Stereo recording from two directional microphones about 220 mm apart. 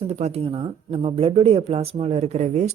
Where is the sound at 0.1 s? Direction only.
30° right (ahead or behind).